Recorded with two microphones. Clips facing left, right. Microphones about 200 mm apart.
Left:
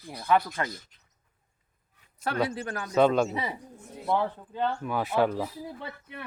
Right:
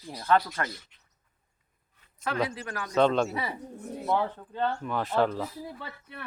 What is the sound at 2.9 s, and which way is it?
Speech, 5° left (ahead or behind).